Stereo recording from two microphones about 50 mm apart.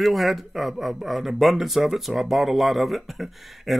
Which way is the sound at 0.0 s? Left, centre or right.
Centre.